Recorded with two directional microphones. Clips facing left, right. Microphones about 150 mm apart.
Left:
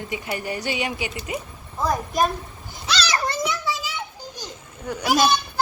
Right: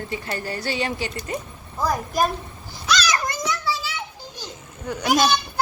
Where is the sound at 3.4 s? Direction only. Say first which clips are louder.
Right 1 dB; 20° left (ahead or behind).